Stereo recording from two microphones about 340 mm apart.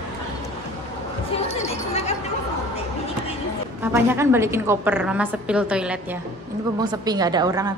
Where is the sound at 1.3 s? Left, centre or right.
Centre.